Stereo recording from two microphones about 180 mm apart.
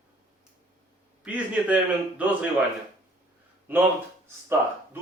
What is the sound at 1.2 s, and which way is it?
A man's voice, 10° right (ahead or behind).